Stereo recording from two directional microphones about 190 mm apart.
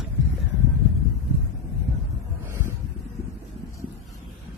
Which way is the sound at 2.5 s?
15° right (ahead or behind).